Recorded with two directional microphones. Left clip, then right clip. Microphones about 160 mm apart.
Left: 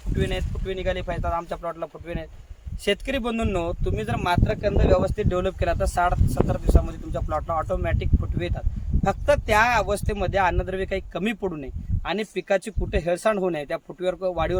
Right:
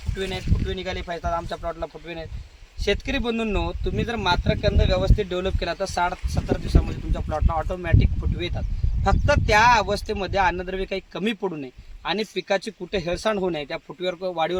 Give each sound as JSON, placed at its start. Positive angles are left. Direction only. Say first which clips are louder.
{"t": 0.2, "sound": "speech", "louder": "even", "side_deg": 5}